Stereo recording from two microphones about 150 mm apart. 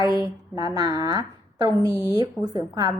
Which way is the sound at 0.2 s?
25° right (ahead or behind).